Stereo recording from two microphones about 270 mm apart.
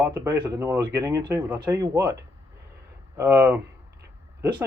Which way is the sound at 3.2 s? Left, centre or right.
Centre.